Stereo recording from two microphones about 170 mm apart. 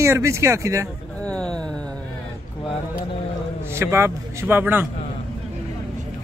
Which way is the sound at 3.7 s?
15° right (ahead or behind).